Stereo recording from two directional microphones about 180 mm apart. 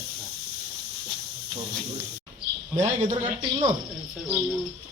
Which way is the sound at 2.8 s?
40° right (ahead or behind).